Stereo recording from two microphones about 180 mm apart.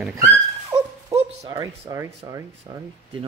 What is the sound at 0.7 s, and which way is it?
Dog, 20° right (ahead or behind).